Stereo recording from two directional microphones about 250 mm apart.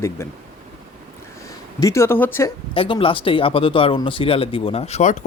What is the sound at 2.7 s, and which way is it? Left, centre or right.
Speech, left.